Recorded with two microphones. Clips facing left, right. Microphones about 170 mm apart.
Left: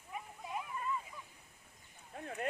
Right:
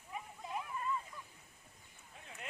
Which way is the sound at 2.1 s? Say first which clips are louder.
Left 12 dB; 55° left (ahead or behind).